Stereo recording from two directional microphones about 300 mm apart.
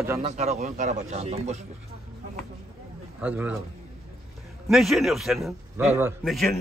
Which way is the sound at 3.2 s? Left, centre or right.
Centre.